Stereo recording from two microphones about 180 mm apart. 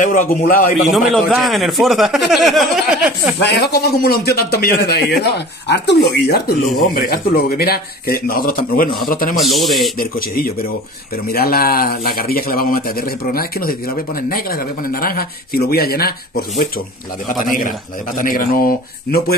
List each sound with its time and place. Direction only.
0.0 s speech: 45° left (ahead or behind)
0.9 s speech: centre (ahead or behind)
3.5 s a man's voice: 65° left (ahead or behind)
9.4 s speech: centre (ahead or behind)
9.9 s a man's voice: 55° left (ahead or behind)